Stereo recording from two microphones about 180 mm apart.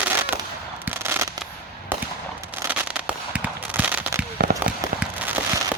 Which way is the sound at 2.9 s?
10° right (ahead or behind).